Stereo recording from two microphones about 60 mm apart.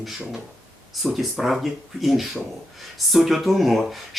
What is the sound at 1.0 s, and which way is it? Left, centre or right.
Speech, centre.